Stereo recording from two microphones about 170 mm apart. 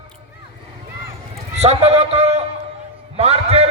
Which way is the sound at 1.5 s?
40° right (ahead or behind).